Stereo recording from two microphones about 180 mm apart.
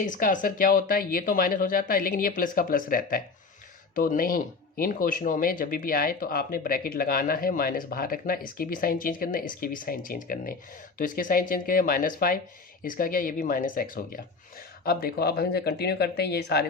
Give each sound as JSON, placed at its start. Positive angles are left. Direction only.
{"t": 0.0, "sound": "speech", "side_deg": 45}
{"t": 14.8, "sound": "speech", "side_deg": 60}